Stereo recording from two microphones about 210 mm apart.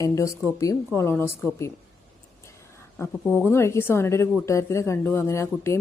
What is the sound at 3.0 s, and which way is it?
A woman's voice, 10° left (ahead or behind).